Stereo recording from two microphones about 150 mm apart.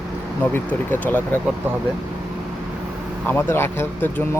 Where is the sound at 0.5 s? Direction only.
10° left (ahead or behind).